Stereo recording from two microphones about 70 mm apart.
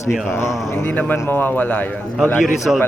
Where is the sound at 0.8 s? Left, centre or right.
Left.